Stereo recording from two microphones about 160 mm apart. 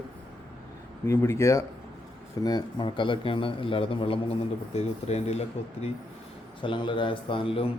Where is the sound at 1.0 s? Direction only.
15° left (ahead or behind); by 5.4 s 40° left (ahead or behind).